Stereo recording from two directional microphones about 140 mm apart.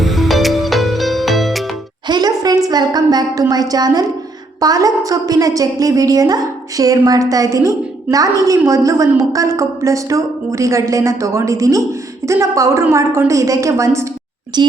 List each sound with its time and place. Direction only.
0.0 s music: centre (ahead or behind)
2.0 s a sound: 30° right (ahead or behind)
3.5 s a woman's voice: 30° right (ahead or behind)
14.5 s a child's voice: 30° right (ahead or behind)